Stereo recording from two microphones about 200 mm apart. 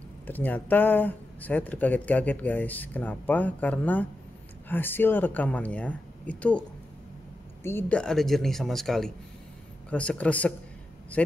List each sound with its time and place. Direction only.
0.3 s speech: 10° left (ahead or behind)
7.6 s speech: 10° left (ahead or behind)